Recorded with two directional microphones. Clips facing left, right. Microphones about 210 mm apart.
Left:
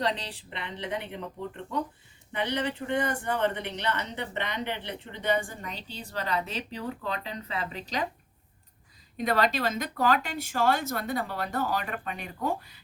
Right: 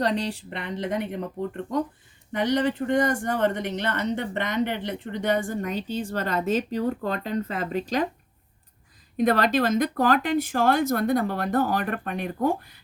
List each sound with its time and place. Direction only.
0.0 s speech: 45° right (ahead or behind)
9.1 s speech: 45° right (ahead or behind)